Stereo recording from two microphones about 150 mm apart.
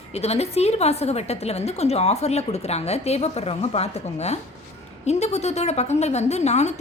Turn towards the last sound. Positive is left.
turn(degrees=50)  # may be behind; listen again after turning